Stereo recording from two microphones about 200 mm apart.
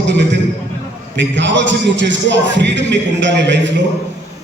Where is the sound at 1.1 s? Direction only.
65° right (ahead or behind).